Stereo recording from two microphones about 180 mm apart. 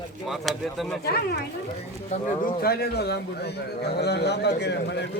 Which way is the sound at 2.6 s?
60° left (ahead or behind).